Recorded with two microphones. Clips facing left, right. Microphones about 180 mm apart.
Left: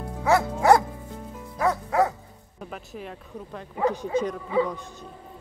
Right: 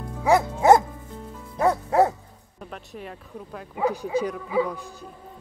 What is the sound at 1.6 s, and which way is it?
Music, 30° right (ahead or behind).